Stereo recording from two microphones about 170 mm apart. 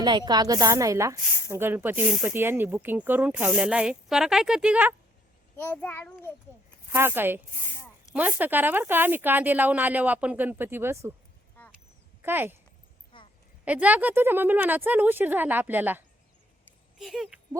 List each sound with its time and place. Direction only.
0.0 s a woman's voice: 25° right (ahead or behind); by 4.9 s 10° right (ahead or behind)
5.5 s a child's voice: 10° left (ahead or behind)
6.9 s speech: 15° right (ahead or behind)
11.6 s a sound: 10° left (ahead or behind)
12.2 s speech: 10° right (ahead or behind)
13.1 s a sound: 30° left (ahead or behind)
13.7 s speech: 10° right (ahead or behind)